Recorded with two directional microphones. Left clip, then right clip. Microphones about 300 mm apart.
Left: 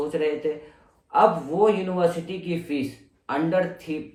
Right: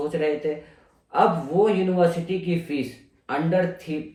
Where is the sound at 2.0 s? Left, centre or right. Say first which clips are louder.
Right 2 dB; centre.